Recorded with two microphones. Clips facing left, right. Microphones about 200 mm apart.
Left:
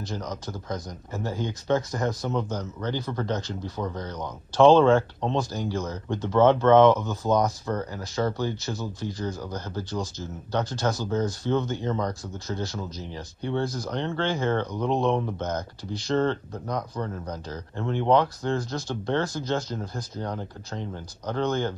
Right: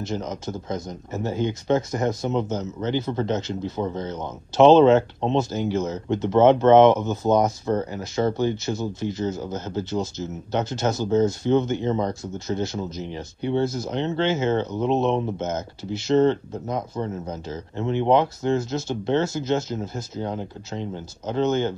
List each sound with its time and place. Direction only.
0.0 s speech: 25° right (ahead or behind)